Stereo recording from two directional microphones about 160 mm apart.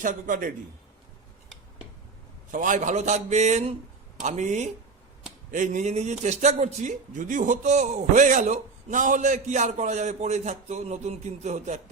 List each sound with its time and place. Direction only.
0.0 s a man's voice: 55° right (ahead or behind)
2.5 s a man's voice: 55° right (ahead or behind)